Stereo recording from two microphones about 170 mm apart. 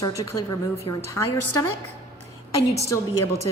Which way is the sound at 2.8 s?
15° left (ahead or behind).